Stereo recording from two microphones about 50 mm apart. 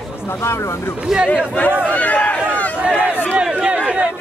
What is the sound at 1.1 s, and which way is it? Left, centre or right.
Speech, centre.